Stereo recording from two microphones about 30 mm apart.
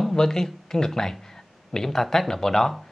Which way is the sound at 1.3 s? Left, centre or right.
Centre.